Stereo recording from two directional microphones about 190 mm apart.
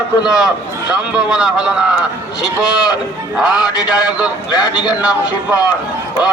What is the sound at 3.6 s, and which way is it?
A man's voice, 20° left (ahead or behind).